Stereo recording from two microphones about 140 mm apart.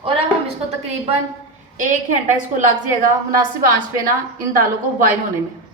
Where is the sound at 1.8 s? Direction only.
65° right (ahead or behind).